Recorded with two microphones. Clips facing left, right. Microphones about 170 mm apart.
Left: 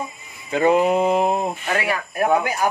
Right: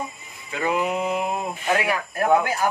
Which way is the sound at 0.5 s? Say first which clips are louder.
Left 7 dB; 35° left (ahead or behind).